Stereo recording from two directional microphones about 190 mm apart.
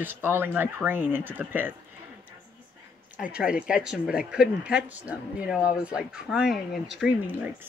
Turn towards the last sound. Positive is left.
turn(degrees=-10)  # may be behind; listen again after turning